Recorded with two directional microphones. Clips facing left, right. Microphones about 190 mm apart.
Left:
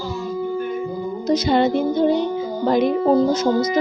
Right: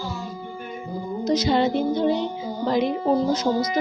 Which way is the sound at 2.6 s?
50° left (ahead or behind).